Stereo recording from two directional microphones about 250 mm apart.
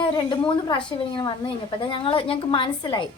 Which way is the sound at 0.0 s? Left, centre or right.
Centre.